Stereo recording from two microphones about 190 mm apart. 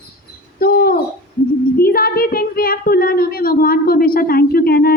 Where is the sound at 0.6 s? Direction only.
50° left (ahead or behind).